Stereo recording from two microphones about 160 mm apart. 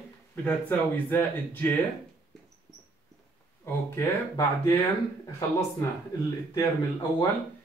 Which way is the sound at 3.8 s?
20° left (ahead or behind).